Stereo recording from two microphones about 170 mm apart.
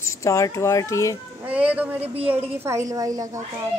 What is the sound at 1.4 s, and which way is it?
A woman's voice, 10° right (ahead or behind).